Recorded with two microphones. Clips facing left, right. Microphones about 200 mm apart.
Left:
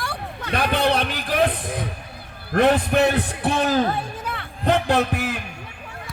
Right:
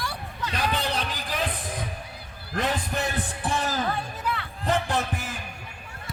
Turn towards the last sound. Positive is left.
turn(degrees=70)  # may be behind; listen again after turning